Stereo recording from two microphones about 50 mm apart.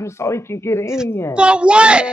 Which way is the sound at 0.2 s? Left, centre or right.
Left.